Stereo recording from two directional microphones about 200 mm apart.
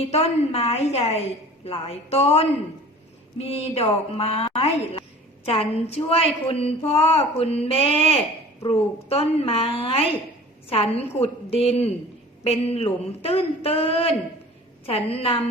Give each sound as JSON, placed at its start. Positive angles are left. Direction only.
{"t": 0.0, "sound": "a woman's voice", "side_deg": 30}